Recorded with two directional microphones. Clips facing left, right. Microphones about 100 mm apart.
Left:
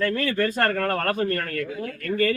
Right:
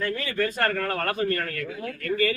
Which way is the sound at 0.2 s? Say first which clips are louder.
Left 3 dB; 55° left (ahead or behind).